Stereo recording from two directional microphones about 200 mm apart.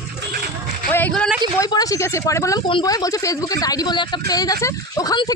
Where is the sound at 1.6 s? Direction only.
15° left (ahead or behind).